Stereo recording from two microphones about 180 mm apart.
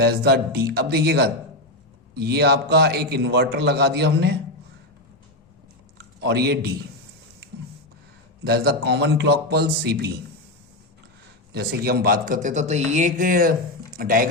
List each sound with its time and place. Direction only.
0.0 s a man's voice: 60° right (ahead or behind)
6.0 s a man's voice: 65° right (ahead or behind)
8.4 s a man's voice: 60° right (ahead or behind)
11.5 s a man's voice: 55° right (ahead or behind)